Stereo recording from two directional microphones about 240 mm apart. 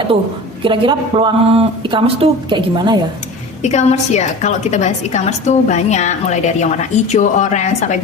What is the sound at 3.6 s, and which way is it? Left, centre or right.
A woman's voice, left.